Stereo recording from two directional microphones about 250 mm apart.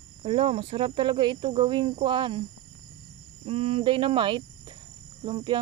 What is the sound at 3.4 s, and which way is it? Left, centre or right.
Speech, right.